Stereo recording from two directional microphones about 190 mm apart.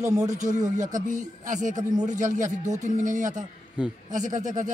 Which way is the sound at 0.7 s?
40° right (ahead or behind).